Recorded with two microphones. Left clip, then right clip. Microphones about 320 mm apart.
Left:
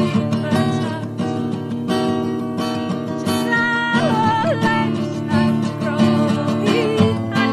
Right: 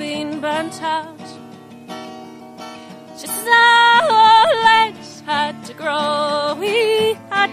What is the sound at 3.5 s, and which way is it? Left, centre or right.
Music, right.